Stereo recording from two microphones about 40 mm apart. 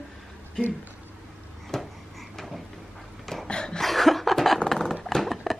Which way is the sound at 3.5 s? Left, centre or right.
Left.